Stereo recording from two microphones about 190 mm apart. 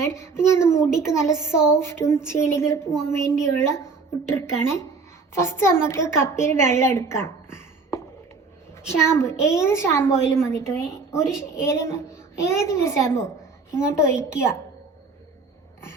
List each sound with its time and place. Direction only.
0.0 s a woman's voice: 15° left (ahead or behind)